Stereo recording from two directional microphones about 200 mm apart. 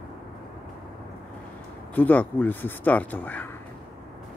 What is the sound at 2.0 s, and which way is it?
Speech, 10° left (ahead or behind).